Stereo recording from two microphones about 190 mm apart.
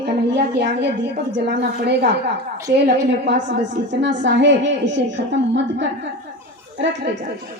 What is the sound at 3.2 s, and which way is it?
A woman's voice, 70° right (ahead or behind).